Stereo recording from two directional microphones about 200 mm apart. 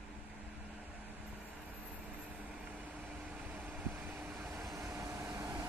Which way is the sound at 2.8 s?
5° right (ahead or behind).